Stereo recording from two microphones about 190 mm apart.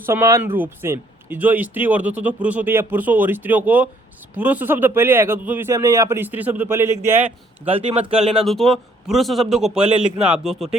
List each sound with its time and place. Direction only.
0.0 s speech: 15° right (ahead or behind)
7.3 s speech: 30° right (ahead or behind)
8.4 s a man's voice: centre (ahead or behind)